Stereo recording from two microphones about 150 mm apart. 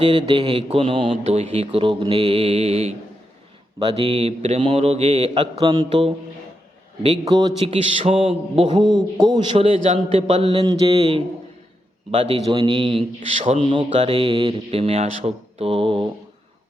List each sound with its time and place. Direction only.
0.0 s a man's voice: 35° right (ahead or behind)
7.3 s a man's voice: 30° right (ahead or behind)
8.0 s a man's voice: 40° right (ahead or behind)
9.8 s a man's voice: 45° right (ahead or behind); by 10.9 s 25° right (ahead or behind)
12.1 s a man's voice: 40° right (ahead or behind)
13.1 s a man's voice: 50° right (ahead or behind)
13.6 s a man's voice: 30° right (ahead or behind)